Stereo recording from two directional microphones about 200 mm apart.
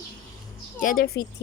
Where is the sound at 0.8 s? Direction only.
45° left (ahead or behind).